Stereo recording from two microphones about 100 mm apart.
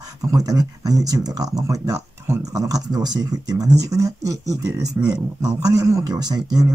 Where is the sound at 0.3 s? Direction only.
40° right (ahead or behind).